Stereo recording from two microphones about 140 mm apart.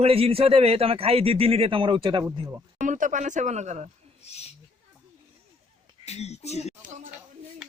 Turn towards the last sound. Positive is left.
turn(degrees=-60)  # may be behind; listen again after turning